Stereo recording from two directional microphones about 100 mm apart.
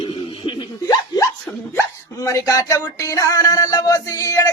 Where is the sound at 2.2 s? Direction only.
30° left (ahead or behind).